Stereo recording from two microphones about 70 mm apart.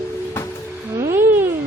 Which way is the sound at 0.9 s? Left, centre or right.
Right.